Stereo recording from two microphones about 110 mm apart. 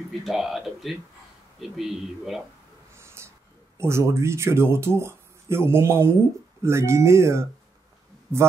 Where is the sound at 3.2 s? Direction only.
25° right (ahead or behind).